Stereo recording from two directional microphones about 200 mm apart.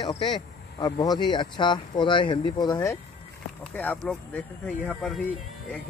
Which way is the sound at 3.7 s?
5° left (ahead or behind).